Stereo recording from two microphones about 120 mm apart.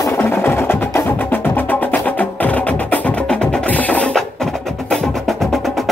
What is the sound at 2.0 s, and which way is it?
Wood block, 10° left (ahead or behind).